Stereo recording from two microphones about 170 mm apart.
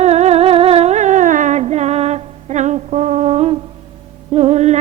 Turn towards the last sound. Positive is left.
turn(degrees=-40)  # may be behind; listen again after turning